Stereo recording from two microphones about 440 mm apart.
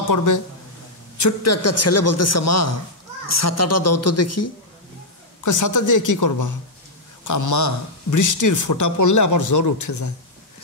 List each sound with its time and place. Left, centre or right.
0.0 s a man's voice: left